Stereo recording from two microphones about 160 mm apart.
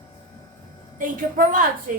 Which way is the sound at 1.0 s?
60° right (ahead or behind).